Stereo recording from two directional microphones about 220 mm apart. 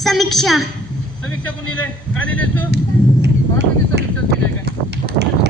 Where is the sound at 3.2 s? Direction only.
50° right (ahead or behind).